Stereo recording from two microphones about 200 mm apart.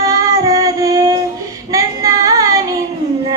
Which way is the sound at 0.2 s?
15° right (ahead or behind).